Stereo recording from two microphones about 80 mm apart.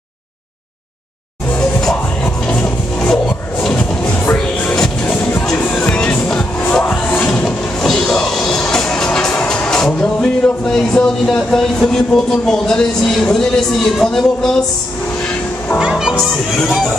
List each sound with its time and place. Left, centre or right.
1.5 s music: centre
3.0 s music: centre
15.8 s speech: centre